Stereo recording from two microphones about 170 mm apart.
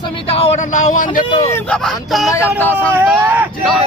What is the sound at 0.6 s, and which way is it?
Speech, 45° left (ahead or behind).